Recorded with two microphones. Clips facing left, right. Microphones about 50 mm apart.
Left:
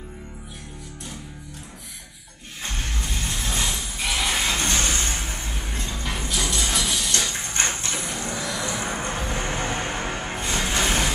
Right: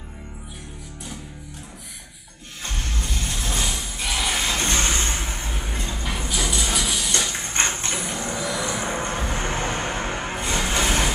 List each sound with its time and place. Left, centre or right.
3.2 s a sound: centre
3.4 s music: centre
4.7 s vehicle: right
6.2 s music: centre
7.5 s a sound: right
8.4 s vehicle: centre
9.1 s music: centre
9.4 s music: right
10.7 s a sound: centre